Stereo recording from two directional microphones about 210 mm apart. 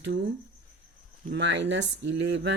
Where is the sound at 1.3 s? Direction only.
55° right (ahead or behind).